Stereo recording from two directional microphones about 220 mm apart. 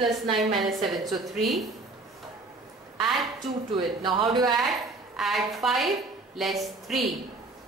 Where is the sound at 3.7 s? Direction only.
20° right (ahead or behind).